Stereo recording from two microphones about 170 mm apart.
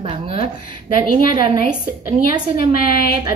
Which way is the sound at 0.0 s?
35° right (ahead or behind).